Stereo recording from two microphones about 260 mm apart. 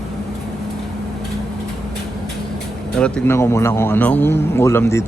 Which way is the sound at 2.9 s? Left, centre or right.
Centre.